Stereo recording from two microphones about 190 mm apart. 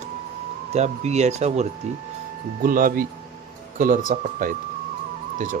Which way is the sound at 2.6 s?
50° right (ahead or behind).